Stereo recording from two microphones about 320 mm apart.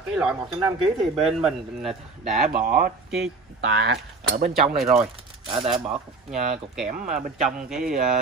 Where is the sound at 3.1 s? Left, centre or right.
Centre.